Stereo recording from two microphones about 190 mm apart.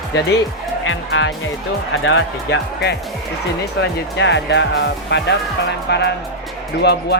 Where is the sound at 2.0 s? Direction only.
80° left.